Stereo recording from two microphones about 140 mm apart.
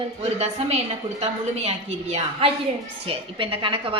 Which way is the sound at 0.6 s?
50° right (ahead or behind).